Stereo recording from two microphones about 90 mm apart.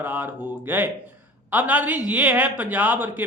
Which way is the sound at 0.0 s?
20° right (ahead or behind).